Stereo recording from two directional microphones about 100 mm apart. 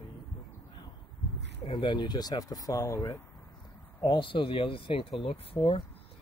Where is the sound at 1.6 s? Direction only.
55° left (ahead or behind); by 3.2 s 35° left (ahead or behind).